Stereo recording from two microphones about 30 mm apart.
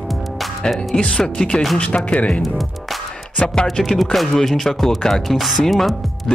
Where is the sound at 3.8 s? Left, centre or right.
Centre.